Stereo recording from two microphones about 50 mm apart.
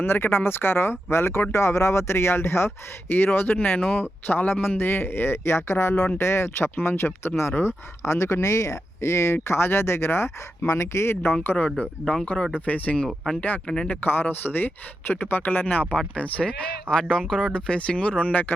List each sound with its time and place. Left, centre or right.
0.0 s speech: left
4.8 s speech: left
8.0 s speech: left
11.6 s speech: left
13.7 s speech: centre
13.9 s speech: left
16.0 s speech: left